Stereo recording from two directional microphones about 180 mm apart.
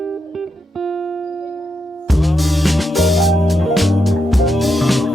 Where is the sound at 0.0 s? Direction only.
Centre (ahead or behind).